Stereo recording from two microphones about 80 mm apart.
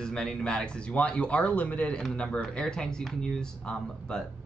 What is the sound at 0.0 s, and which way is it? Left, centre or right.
Speech, centre.